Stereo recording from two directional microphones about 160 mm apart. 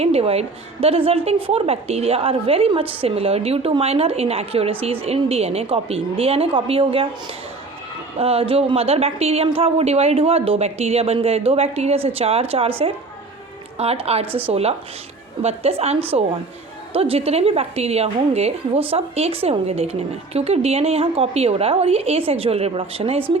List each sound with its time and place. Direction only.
0.0 s a woman's voice: 40° right (ahead or behind)
8.2 s a woman's voice: 35° right (ahead or behind)
13.7 s a woman's voice: 40° right (ahead or behind)
14.3 s a woman's voice: 10° right (ahead or behind)
14.5 s a woman's voice: 40° right (ahead or behind)